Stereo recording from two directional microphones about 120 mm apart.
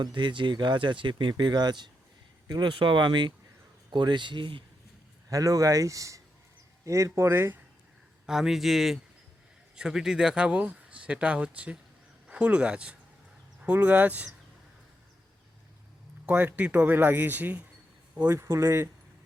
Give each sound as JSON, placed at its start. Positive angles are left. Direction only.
{"t": 0.0, "sound": "speech", "side_deg": -40}
{"t": 5.3, "sound": "speech", "side_deg": -30}
{"t": 8.3, "sound": "a man's voice", "side_deg": -5}
{"t": 16.2, "sound": "speech", "side_deg": -15}